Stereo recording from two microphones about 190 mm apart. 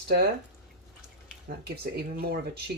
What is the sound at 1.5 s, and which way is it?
Speech, 60° right (ahead or behind).